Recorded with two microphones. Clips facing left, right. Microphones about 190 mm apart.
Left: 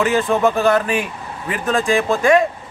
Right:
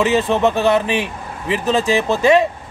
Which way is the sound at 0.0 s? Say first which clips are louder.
Right 1 dB; 20° right (ahead or behind).